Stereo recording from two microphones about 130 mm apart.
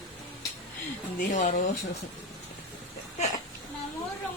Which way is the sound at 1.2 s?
75° left (ahead or behind).